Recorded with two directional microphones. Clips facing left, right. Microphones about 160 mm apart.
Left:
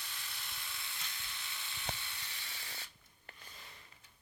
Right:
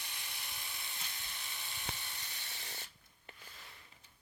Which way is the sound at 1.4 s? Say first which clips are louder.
Left 2 dB; 40° right (ahead or behind).